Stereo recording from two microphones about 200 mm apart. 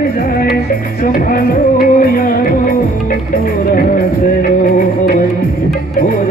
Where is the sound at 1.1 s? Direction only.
45° left (ahead or behind).